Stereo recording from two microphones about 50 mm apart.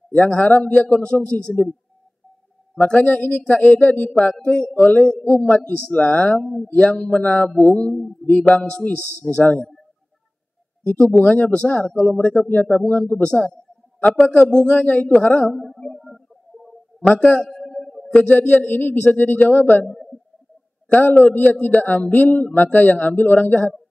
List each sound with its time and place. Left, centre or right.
0.1 s speech: left
2.8 s speech: left
4.4 s speech: centre
4.7 s speech: left
6.4 s speech: centre
6.8 s speech: left
10.9 s speech: left
13.2 s speech: left
15.5 s speech: centre
17.1 s speech: left
17.5 s a sound: centre
18.7 s speech: left
21.0 s speech: left